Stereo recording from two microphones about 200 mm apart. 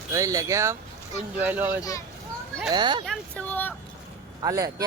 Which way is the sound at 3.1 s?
5° left (ahead or behind).